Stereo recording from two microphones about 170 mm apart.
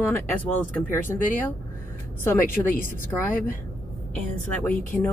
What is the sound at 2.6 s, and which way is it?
Speech, 15° left (ahead or behind).